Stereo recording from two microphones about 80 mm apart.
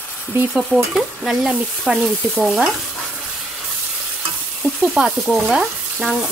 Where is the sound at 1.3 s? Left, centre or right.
Centre.